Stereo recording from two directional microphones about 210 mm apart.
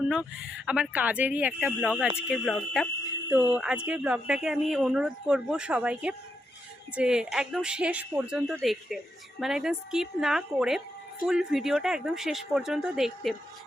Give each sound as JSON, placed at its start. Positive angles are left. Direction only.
{"t": 0.0, "sound": "speech", "side_deg": -5}